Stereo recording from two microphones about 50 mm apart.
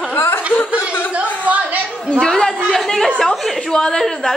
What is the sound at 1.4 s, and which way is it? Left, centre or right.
Speech, right.